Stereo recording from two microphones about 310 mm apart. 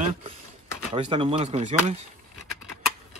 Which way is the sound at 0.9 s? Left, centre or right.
Centre.